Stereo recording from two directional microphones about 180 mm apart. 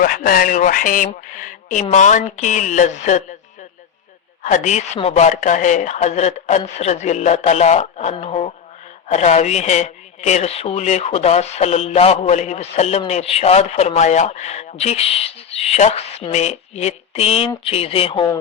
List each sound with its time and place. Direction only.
0.0 s speech: 50° left (ahead or behind)
4.4 s speech: 40° left (ahead or behind); by 18.3 s 25° left (ahead or behind)